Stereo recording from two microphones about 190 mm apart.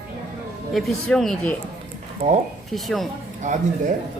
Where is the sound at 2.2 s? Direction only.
40° right (ahead or behind).